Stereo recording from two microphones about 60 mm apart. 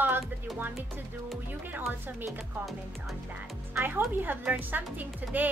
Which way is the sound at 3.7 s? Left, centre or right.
Right.